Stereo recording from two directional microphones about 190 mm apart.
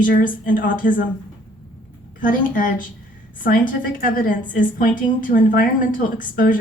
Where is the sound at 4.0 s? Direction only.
45° left (ahead or behind).